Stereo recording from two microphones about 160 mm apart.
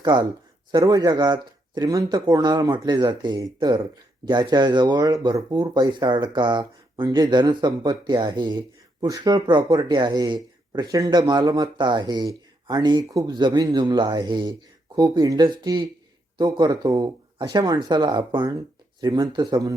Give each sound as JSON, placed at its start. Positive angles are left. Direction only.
{"t": 0.0, "sound": "speech", "side_deg": -30}